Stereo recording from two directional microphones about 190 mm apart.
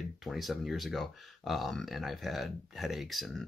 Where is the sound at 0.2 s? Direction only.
Centre (ahead or behind).